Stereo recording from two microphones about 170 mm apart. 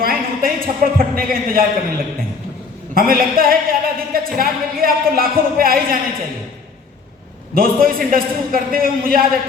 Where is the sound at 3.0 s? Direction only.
60° right (ahead or behind).